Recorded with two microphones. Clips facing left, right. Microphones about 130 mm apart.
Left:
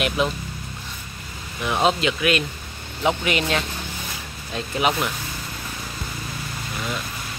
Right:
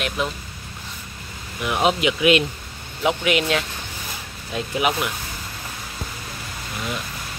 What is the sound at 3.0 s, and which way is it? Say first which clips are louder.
Speech: right 1 dB; 5° right (ahead or behind).